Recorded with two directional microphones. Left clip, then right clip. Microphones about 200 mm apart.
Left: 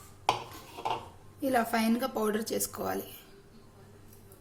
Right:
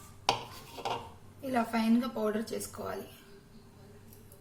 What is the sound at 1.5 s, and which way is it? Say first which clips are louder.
A woman's voice: left 1 dB; 55° left (ahead or behind).